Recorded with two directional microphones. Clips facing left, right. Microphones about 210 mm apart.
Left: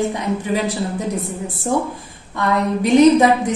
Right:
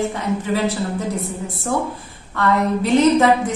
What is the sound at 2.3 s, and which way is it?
Speech, 15° left (ahead or behind).